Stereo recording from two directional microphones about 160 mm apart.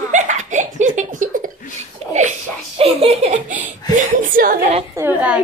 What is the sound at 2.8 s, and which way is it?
Speech, 40° right (ahead or behind).